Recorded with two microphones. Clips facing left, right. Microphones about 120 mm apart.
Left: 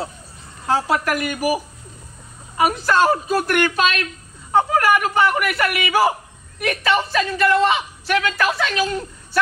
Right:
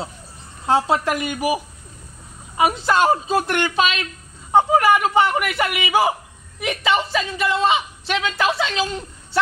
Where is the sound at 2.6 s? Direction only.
20° right (ahead or behind).